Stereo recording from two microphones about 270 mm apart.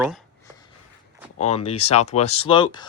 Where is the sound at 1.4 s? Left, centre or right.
Left.